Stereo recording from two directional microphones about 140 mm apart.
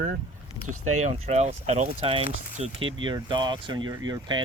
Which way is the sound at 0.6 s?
55° right (ahead or behind).